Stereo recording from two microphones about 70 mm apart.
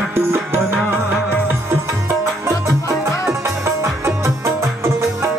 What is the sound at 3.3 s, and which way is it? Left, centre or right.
Music, right.